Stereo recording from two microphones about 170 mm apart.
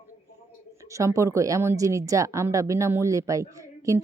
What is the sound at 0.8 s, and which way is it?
A woman's voice, 20° right (ahead or behind).